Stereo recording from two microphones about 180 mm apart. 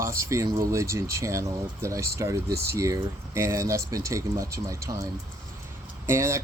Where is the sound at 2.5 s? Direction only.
60° right (ahead or behind).